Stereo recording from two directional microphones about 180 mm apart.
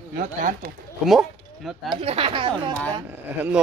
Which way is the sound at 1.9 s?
30° right (ahead or behind).